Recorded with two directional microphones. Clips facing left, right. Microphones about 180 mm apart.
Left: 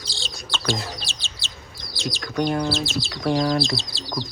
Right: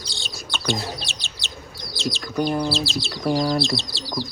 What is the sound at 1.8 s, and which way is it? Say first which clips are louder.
Speech: right 2 dB; centre (ahead or behind).